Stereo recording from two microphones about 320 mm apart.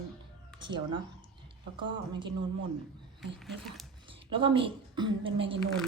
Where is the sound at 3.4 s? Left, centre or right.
Centre.